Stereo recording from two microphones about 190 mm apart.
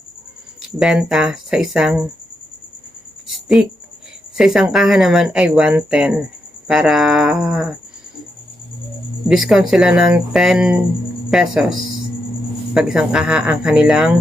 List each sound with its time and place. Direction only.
0.8 s speech: 5° right (ahead or behind)
4.4 s speech: 5° right (ahead or behind)
9.3 s speech: centre (ahead or behind)